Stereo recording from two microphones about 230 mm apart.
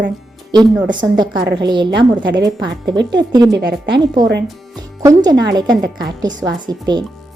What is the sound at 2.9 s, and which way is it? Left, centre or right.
Speech, right.